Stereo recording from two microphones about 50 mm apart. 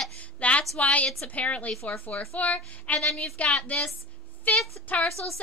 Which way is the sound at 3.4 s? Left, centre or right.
Left.